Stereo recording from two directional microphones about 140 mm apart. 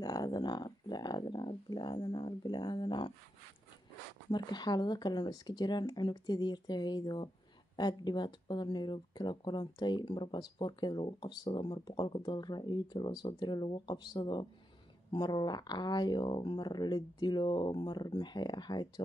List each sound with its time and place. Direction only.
0.0 s speech: 30° left (ahead or behind)
4.3 s speech: 30° left (ahead or behind)